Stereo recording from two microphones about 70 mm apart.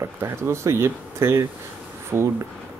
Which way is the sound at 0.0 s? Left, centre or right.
Right.